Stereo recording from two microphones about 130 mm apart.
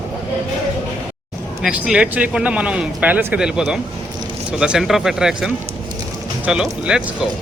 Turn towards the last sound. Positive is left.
turn(degrees=-5)  # may be behind; listen again after turning